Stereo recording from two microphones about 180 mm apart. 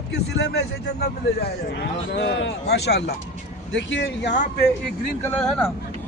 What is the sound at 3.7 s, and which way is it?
Speech, 90° left.